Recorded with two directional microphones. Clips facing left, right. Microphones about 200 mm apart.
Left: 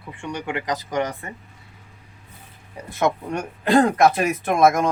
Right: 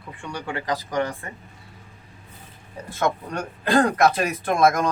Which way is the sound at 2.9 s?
20° left (ahead or behind).